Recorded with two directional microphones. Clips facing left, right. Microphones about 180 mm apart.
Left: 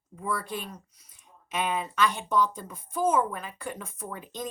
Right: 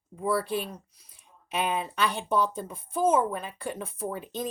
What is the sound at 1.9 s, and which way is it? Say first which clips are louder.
A woman's voice: left 2 dB; 30° right (ahead or behind).